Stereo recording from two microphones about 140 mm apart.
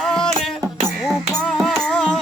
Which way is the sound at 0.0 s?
5° left (ahead or behind).